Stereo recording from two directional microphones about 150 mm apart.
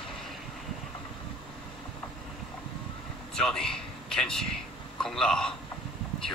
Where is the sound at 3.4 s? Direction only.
5° left (ahead or behind).